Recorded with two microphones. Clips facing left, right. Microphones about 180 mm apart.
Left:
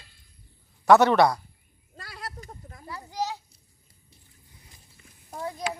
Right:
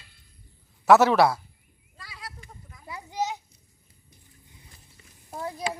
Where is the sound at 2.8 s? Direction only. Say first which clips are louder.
Right 1 dB; 20° right (ahead or behind).